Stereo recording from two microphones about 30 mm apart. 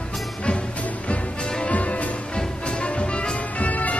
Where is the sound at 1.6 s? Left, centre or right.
Left.